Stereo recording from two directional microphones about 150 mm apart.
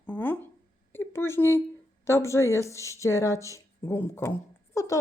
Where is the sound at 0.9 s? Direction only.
15° left (ahead or behind).